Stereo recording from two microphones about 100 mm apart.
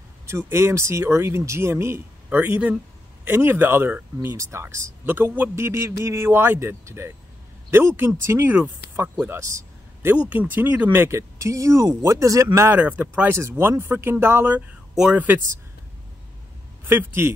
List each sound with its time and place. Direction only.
0.3 s a man's voice: 25° right (ahead or behind)
10.3 s speech: 20° right (ahead or behind)
12.8 s speech: 15° right (ahead or behind)
15.0 s speech: 10° right (ahead or behind)
16.8 s speech: 20° right (ahead or behind)